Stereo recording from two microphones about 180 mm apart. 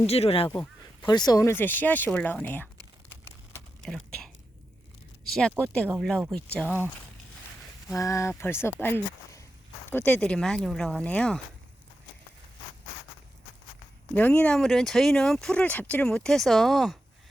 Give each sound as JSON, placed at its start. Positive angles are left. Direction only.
{"t": 0.1, "sound": "speech", "side_deg": 35}
{"t": 3.2, "sound": "a sound", "side_deg": 5}
{"t": 5.2, "sound": "speech", "side_deg": 0}
{"t": 6.7, "sound": "speech", "side_deg": -10}
{"t": 7.9, "sound": "speech", "side_deg": 15}
{"t": 14.1, "sound": "speech", "side_deg": 10}